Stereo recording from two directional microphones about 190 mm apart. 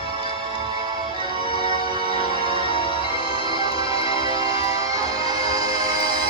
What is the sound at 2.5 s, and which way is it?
Music, 30° right (ahead or behind).